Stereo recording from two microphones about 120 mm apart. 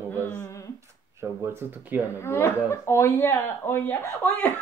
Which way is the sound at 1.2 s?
20° right (ahead or behind).